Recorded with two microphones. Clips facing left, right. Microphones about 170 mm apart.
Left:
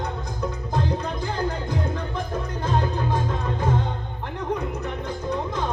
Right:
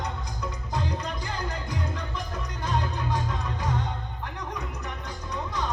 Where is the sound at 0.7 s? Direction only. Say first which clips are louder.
Left 4 dB; 55° left (ahead or behind).